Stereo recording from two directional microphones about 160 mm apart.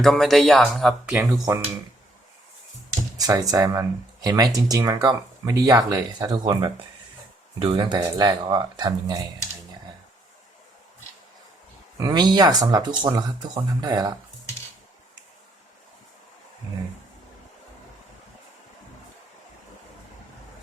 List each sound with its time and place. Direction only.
0.0 s speech: centre (ahead or behind)
1.2 s speech: 20° right (ahead or behind)
3.2 s speech: 25° right (ahead or behind)
11.9 s speech: 25° right (ahead or behind)